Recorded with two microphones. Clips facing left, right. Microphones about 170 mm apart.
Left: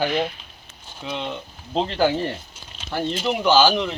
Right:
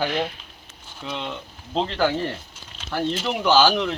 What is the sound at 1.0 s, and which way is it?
Speech, 15° left (ahead or behind).